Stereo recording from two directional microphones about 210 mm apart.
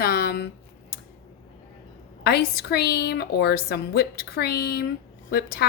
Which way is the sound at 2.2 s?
50° left (ahead or behind).